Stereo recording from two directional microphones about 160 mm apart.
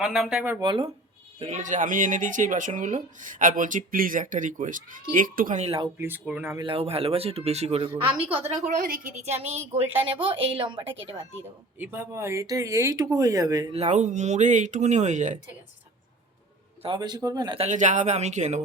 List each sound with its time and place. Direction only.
0.0 s speech: 5° right (ahead or behind)
0.6 s speech: 30° right (ahead or behind)
1.4 s speech: 50° right (ahead or behind)
5.6 s speech: 35° right (ahead or behind)
6.0 s speech: 10° right (ahead or behind)
6.6 s speech: 35° right (ahead or behind)
8.8 s speech: 60° right (ahead or behind); by 11.3 s 35° right (ahead or behind)
11.8 s speech: 10° right (ahead or behind)
13.7 s speech: 45° right (ahead or behind)
16.8 s speech: 30° right (ahead or behind)
17.6 s speech: 50° right (ahead or behind)